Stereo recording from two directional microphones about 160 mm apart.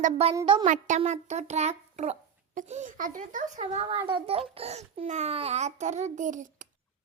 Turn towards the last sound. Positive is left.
turn(degrees=-55)  # may be behind; listen again after turning